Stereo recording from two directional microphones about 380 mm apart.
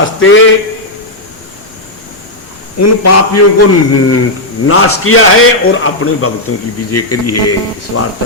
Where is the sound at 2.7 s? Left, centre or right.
Left.